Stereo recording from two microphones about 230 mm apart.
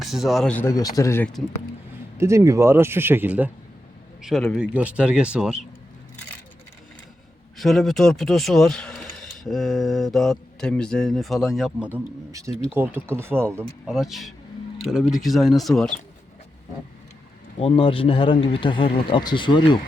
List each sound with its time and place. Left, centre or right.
0.0 s speech: centre
2.1 s speech: centre
7.6 s speech: centre
17.6 s speech: left